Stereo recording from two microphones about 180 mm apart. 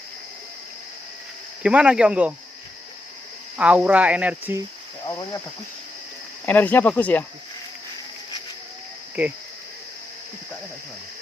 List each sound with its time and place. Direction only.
1.6 s speech: 5° right (ahead or behind)
3.6 s speech: 5° right (ahead or behind)
5.0 s speech: 20° left (ahead or behind)
6.4 s speech: 10° left (ahead or behind)